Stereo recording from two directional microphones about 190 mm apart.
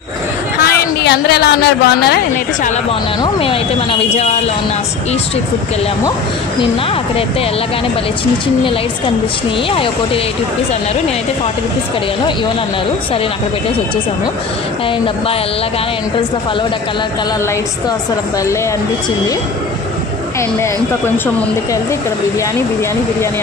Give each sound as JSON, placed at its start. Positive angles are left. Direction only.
{"t": 0.7, "sound": "speech", "side_deg": 60}
{"t": 3.2, "sound": "speech", "side_deg": 30}
{"t": 9.7, "sound": "speech", "side_deg": 30}